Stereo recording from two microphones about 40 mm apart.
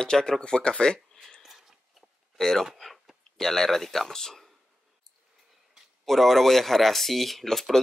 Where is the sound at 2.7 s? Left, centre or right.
Centre.